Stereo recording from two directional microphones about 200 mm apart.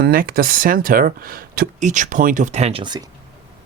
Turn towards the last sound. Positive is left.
turn(degrees=-25)  # may be behind; listen again after turning